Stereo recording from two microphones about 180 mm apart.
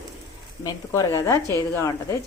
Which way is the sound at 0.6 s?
20° left (ahead or behind).